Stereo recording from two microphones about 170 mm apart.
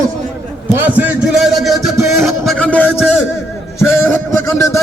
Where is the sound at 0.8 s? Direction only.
10° right (ahead or behind); by 2.9 s 10° left (ahead or behind).